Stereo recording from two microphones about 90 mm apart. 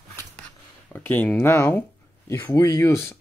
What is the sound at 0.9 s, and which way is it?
Speech, 20° left (ahead or behind).